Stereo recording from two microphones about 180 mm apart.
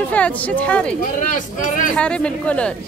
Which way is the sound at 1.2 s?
45° left (ahead or behind).